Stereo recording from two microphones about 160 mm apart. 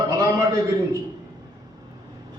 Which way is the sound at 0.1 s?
20° right (ahead or behind).